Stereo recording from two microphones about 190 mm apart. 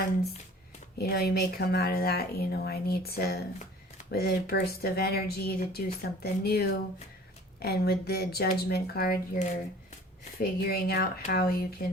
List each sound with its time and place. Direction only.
0.9 s speech: 55° left (ahead or behind)